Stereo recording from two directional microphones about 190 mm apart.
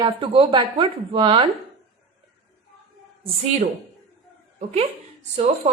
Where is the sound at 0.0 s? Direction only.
25° right (ahead or behind).